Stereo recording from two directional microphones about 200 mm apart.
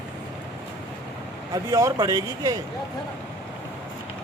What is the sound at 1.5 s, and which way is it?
Speech, 15° right (ahead or behind).